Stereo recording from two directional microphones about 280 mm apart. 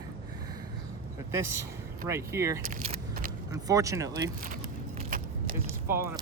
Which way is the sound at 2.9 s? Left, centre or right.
Right.